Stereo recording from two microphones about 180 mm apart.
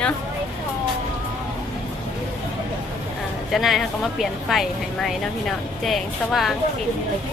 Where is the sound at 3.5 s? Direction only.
Centre (ahead or behind).